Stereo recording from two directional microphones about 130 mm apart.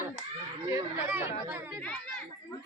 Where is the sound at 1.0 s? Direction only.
15° right (ahead or behind).